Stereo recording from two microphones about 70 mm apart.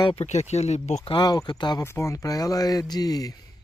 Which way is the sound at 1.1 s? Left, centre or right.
Left.